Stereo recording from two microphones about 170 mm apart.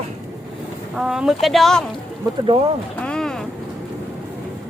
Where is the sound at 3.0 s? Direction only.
5° left (ahead or behind).